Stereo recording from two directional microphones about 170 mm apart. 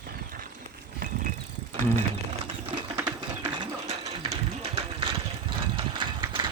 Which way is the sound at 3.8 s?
40° right (ahead or behind).